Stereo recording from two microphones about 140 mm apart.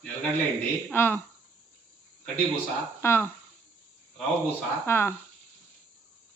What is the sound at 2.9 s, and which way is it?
Speech, 15° left (ahead or behind).